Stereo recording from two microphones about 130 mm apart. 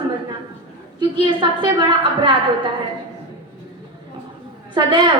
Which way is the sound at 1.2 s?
40° right (ahead or behind).